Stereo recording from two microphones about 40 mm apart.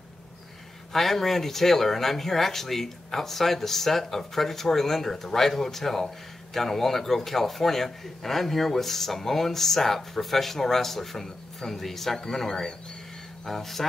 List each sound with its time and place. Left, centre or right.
0.9 s speech: centre